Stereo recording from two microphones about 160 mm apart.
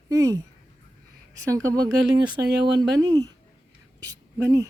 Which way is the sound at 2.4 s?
90° right.